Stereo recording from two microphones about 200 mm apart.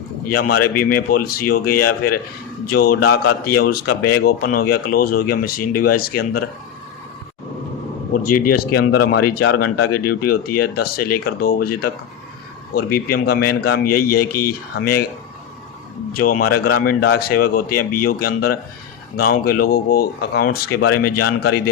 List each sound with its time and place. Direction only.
0.3 s a man's voice: 50° left (ahead or behind)
8.1 s a man's voice: 45° left (ahead or behind)
16.1 s a man's voice: 45° left (ahead or behind)